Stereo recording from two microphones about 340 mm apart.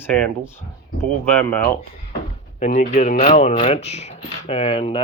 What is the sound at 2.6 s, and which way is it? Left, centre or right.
Speech, centre.